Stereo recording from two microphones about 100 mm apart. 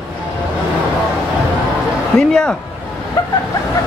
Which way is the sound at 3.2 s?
40° left (ahead or behind).